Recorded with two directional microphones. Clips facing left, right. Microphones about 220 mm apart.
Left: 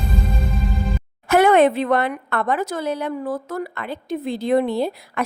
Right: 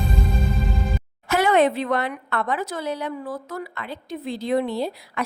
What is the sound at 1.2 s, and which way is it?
A woman's voice, 55° left (ahead or behind).